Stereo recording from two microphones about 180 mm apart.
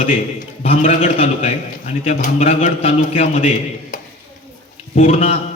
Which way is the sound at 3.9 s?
45° left (ahead or behind).